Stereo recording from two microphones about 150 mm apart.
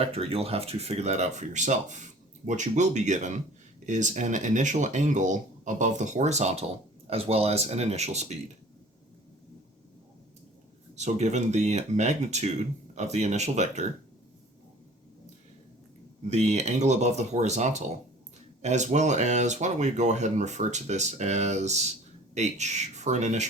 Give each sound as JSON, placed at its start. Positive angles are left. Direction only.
{"t": 0.0, "sound": "speech", "side_deg": -40}
{"t": 10.9, "sound": "speech", "side_deg": -50}
{"t": 16.3, "sound": "speech", "side_deg": -50}